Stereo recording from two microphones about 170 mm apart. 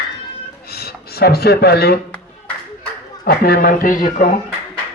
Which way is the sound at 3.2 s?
65° left (ahead or behind).